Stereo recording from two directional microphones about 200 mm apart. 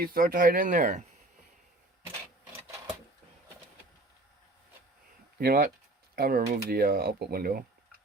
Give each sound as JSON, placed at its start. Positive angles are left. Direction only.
{"t": 0.0, "sound": "speech", "side_deg": -45}
{"t": 5.4, "sound": "speech", "side_deg": -50}